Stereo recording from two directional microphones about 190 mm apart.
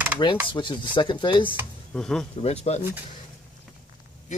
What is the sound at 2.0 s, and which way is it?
Speech, 5° left (ahead or behind).